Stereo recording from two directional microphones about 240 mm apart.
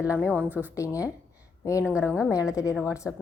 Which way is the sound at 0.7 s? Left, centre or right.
Centre.